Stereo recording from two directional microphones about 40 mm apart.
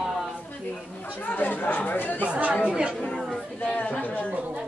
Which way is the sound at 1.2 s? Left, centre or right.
Left.